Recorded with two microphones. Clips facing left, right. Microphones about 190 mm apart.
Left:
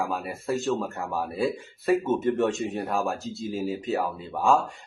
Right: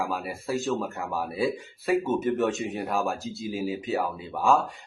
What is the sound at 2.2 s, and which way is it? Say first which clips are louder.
Speech: left 1 dB; centre (ahead or behind).